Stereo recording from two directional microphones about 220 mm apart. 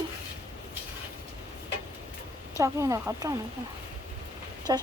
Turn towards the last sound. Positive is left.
turn(degrees=-15)  # may be behind; listen again after turning